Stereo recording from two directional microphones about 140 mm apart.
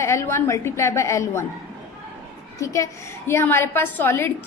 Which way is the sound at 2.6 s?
20° left (ahead or behind).